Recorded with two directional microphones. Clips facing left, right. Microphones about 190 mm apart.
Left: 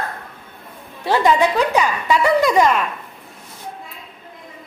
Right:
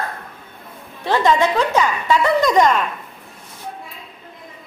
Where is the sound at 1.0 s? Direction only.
10° left (ahead or behind).